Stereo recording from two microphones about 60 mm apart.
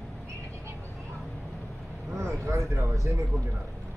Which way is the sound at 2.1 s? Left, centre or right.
Right.